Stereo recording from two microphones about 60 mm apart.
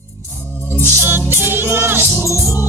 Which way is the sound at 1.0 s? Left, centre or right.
Right.